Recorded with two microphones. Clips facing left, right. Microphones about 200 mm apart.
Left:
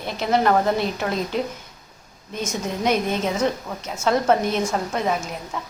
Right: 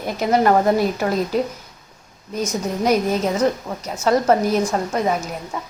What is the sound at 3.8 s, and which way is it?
A woman's voice, centre (ahead or behind).